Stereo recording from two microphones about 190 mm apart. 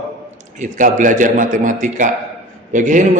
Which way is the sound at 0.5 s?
40° right (ahead or behind).